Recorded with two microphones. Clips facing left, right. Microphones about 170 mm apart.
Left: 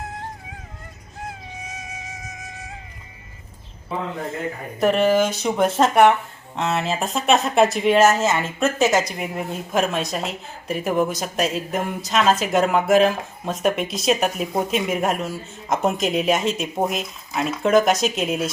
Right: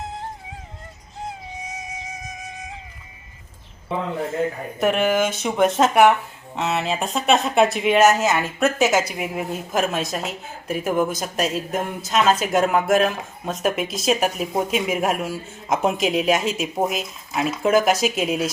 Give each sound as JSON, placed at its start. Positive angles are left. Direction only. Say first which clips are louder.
{"t": 1.7, "sound": "music", "louder": "right 2 dB", "side_deg": -20}
{"t": 4.8, "sound": "speech", "louder": "left 2 dB", "side_deg": -5}